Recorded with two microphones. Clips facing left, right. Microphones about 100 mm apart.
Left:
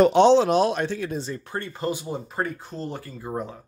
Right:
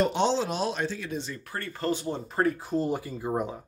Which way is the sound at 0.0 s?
70° left (ahead or behind).